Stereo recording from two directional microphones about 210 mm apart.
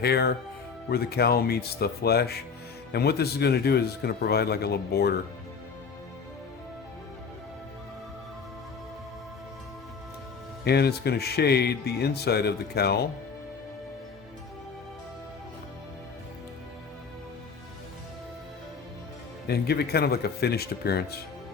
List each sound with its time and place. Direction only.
0.0 s speech: 50° left (ahead or behind)
10.6 s speech: 50° left (ahead or behind)
19.5 s speech: 50° left (ahead or behind)